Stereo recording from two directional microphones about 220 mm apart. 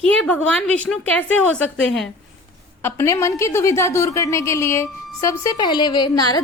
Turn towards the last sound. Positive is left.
turn(degrees=20)  # may be behind; listen again after turning